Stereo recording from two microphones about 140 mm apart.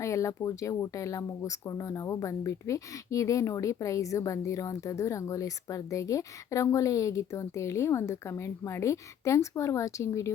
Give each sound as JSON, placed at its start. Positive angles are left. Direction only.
{"t": 0.0, "sound": "speech", "side_deg": 20}